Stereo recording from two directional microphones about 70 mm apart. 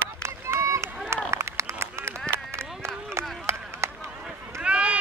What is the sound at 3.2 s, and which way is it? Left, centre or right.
Chop, right.